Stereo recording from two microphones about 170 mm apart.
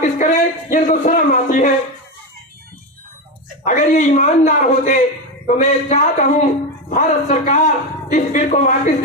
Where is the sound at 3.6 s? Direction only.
45° left (ahead or behind).